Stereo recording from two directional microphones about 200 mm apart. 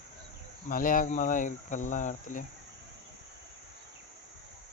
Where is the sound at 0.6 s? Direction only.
45° left (ahead or behind).